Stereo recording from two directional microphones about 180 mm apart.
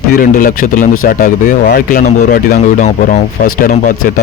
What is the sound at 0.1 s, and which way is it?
Speech, 50° left (ahead or behind).